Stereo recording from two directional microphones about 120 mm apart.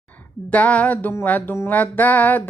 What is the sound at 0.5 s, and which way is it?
Music, 10° left (ahead or behind).